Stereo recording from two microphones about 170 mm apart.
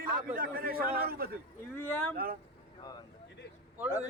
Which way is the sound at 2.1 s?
60° right (ahead or behind).